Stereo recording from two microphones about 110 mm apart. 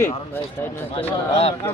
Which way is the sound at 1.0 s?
60° left (ahead or behind).